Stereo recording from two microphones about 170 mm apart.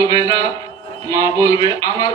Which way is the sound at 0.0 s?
20° left (ahead or behind).